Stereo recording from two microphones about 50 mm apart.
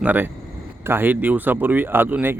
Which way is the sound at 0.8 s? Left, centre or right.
Right.